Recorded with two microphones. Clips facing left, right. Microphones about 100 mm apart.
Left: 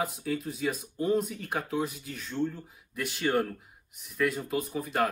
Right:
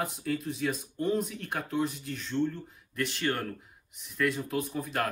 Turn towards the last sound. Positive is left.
turn(degrees=0)  # may be behind; listen again after turning